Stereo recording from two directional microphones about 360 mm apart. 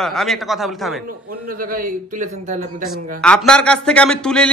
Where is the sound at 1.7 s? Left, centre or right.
Right.